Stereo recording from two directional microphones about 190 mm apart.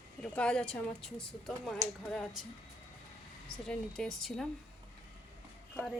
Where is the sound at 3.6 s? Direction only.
5° left (ahead or behind).